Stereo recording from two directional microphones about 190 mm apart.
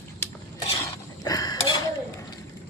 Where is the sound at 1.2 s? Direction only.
20° left (ahead or behind).